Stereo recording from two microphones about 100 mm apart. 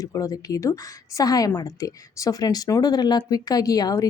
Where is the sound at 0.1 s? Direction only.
35° left (ahead or behind).